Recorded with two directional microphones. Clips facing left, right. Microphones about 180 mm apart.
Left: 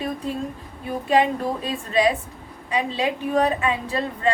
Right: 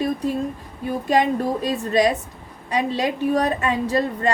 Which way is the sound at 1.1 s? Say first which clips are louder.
Even; 40° right (ahead or behind).